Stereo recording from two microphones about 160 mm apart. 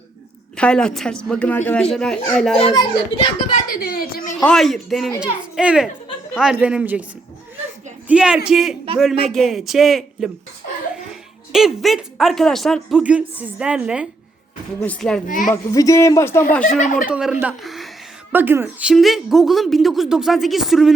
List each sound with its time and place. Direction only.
0.5 s speech: 5° left (ahead or behind)
2.7 s a child's voice: 30° left (ahead or behind)
3.7 s a woman's voice: 65° left (ahead or behind)
4.4 s a man's voice: centre (ahead or behind)
8.0 s speech: 5° right (ahead or behind)
14.8 s speech: 5° left (ahead or behind)
15.3 s a woman's voice: 55° left (ahead or behind)
15.7 s speech: 20° left (ahead or behind)
16.6 s a woman's voice: 50° left (ahead or behind)
17.1 s speech: 5° right (ahead or behind)
18.3 s speech: 10° right (ahead or behind)